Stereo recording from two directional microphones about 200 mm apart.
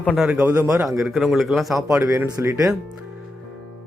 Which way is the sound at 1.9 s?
15° right (ahead or behind).